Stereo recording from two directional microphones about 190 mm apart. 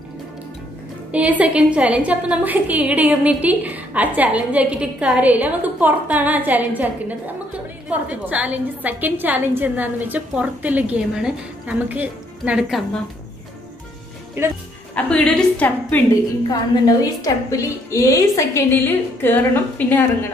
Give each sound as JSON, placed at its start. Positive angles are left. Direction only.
{"t": 1.1, "sound": "a woman's voice", "side_deg": -5}
{"t": 14.4, "sound": "a woman's voice", "side_deg": -10}
{"t": 15.0, "sound": "a woman's voice", "side_deg": 5}
{"t": 16.4, "sound": "a woman's voice", "side_deg": 20}